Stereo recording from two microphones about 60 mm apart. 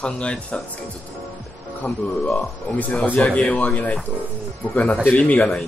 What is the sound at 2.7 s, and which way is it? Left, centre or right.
Speech, left.